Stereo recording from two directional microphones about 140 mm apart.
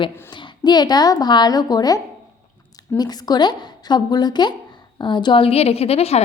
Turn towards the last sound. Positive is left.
turn(degrees=45)  # may be behind; listen again after turning